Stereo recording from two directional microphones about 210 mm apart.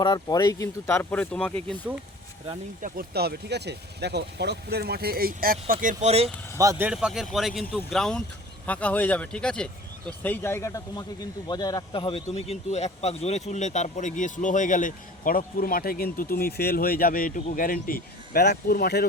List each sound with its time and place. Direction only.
0.0 s speech: 20° left (ahead or behind)
2.8 s speech: 45° right (ahead or behind); by 6.3 s 30° right (ahead or behind)
6.6 s speech: 10° right (ahead or behind); by 19.0 s 50° left (ahead or behind)